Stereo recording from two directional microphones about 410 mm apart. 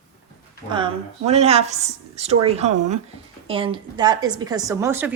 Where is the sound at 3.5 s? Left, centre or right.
Centre.